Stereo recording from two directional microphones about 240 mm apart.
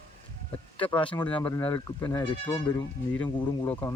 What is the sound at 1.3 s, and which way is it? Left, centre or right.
Speech, centre.